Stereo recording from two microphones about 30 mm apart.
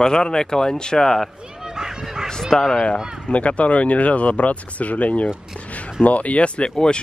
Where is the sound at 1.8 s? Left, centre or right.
Right.